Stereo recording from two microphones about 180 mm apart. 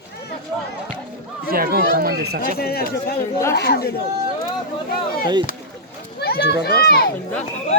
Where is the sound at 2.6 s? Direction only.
60° left (ahead or behind).